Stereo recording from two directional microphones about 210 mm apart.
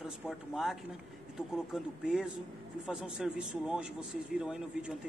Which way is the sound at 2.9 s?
5° right (ahead or behind).